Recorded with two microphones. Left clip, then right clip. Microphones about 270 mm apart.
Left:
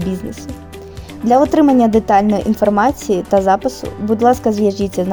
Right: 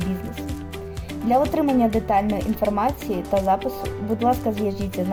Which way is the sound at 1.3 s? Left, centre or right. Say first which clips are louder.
Left 8 dB; left.